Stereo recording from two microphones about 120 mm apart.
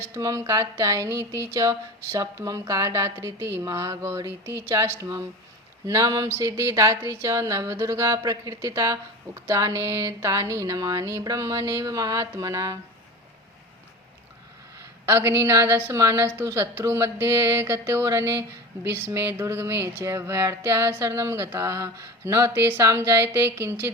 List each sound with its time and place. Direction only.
0.0 s speech: 25° right (ahead or behind)
15.0 s speech: 20° right (ahead or behind)